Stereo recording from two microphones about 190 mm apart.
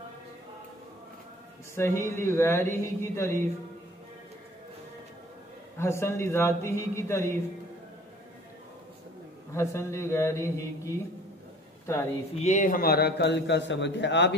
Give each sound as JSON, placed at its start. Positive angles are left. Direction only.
{"t": 1.8, "sound": "speech", "side_deg": 15}
{"t": 5.8, "sound": "speech", "side_deg": 15}
{"t": 9.5, "sound": "speech", "side_deg": 15}
{"t": 12.4, "sound": "a man's voice", "side_deg": 40}